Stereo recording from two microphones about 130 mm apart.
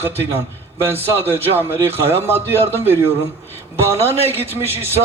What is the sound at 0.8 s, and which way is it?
A man's voice, 20° right (ahead or behind).